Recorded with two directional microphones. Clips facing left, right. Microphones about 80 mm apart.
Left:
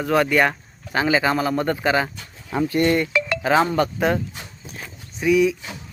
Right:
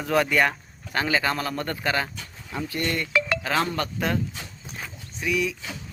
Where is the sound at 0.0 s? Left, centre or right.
Centre.